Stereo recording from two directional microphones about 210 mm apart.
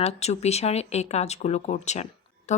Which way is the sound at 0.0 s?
30° left (ahead or behind).